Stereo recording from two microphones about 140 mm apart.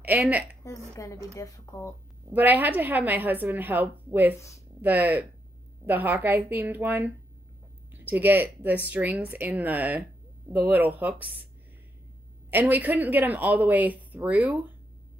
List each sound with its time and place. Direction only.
0.0 s a woman's voice: 10° right (ahead or behind)
0.7 s a woman's voice: 20° left (ahead or behind)
2.3 s a woman's voice: 15° right (ahead or behind)
12.4 s a woman's voice: 15° right (ahead or behind)